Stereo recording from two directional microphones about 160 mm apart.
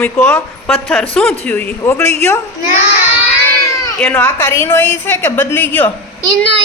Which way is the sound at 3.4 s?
20° left (ahead or behind).